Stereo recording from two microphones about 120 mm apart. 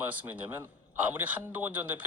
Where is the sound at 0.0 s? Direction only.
15° right (ahead or behind).